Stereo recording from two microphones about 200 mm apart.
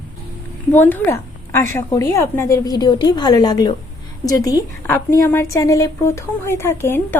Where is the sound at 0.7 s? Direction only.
10° left (ahead or behind).